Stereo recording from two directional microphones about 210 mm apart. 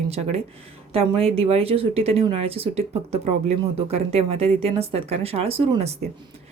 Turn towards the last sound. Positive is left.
turn(degrees=-25)  # may be behind; listen again after turning